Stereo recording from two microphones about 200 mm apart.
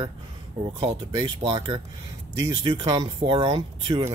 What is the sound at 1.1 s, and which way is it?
Speech, 20° right (ahead or behind).